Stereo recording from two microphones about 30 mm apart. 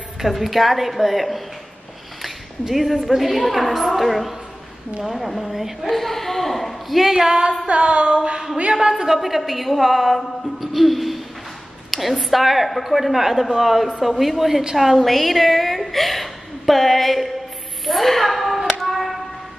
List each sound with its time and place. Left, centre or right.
0.2 s a woman's voice: centre
2.7 s a woman's voice: centre
5.9 s a sound: centre
7.2 s music: right
7.6 s a sound: right
8.8 s music: right
9.4 s a woman's voice: centre
15.0 s a woman's voice: centre
18.8 s a sound: centre